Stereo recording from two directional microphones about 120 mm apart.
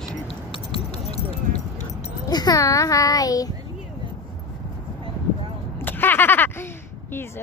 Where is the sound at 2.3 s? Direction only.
35° left (ahead or behind).